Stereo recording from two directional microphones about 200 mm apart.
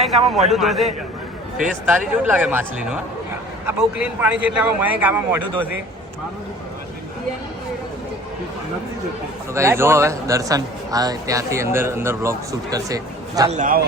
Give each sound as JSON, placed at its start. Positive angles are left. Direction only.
{"t": 0.0, "sound": "a man's voice", "side_deg": 0}
{"t": 1.9, "sound": "a man's voice", "side_deg": -10}
{"t": 9.6, "sound": "a man's voice", "side_deg": -15}
{"t": 13.5, "sound": "a man's voice", "side_deg": -40}